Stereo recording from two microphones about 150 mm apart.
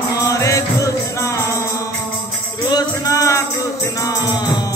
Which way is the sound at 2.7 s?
25° left (ahead or behind).